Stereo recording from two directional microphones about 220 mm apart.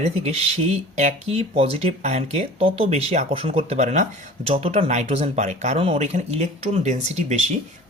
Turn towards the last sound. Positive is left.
turn(degrees=-30)  # may be behind; listen again after turning